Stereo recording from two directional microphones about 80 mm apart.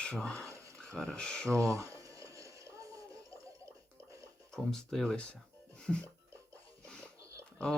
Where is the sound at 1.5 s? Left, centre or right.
Right.